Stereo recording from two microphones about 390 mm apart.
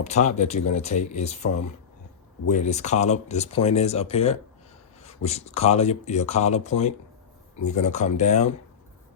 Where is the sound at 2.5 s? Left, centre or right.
Centre.